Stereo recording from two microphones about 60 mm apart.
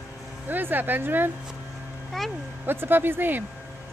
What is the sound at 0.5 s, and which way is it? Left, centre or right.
Speech, right.